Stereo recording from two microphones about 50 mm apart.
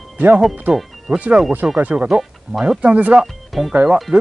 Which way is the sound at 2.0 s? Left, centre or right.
Centre.